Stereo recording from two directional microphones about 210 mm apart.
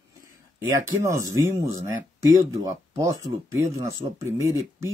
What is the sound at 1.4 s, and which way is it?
Speech, 15° right (ahead or behind).